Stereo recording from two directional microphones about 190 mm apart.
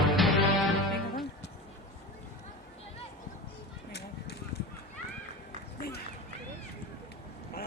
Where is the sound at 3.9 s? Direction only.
60° left (ahead or behind).